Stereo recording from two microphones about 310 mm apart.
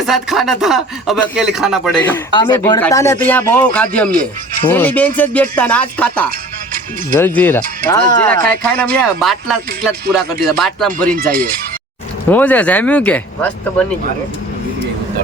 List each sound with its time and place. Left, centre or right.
0.0 s speech: centre
11.1 s speech: right
12.3 s speech: centre